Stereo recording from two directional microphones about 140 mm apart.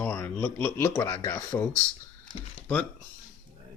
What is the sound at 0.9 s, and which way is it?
Speech, 30° left (ahead or behind).